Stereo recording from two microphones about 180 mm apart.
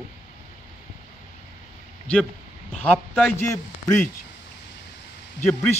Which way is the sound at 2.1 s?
5° left (ahead or behind).